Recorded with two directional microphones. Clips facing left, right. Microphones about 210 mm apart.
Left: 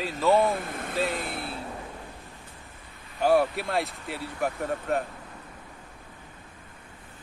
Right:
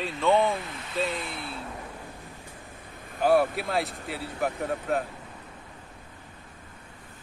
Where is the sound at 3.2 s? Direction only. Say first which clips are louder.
Even; centre (ahead or behind).